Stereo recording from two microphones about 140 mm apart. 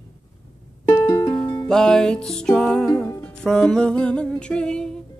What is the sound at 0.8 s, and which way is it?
Music, 25° left (ahead or behind).